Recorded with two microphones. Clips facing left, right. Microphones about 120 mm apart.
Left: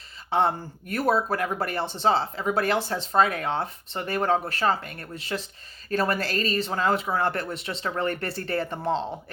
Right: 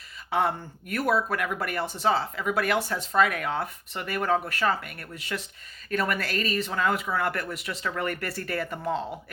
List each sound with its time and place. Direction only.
0.3 s speech: 30° left (ahead or behind)